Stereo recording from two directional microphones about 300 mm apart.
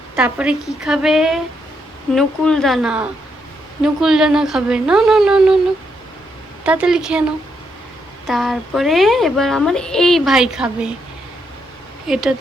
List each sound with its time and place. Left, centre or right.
0.2 s a woman's voice: centre
6.7 s a woman's voice: centre
8.3 s a woman's voice: centre
12.0 s a woman's voice: centre